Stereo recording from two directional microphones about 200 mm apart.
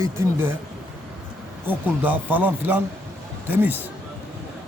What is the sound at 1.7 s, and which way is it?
A man's voice, 10° right (ahead or behind).